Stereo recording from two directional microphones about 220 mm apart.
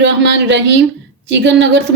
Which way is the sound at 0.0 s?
50° right (ahead or behind).